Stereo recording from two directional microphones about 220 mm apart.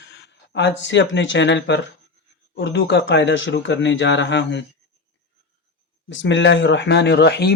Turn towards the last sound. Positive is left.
turn(degrees=50)  # may be behind; listen again after turning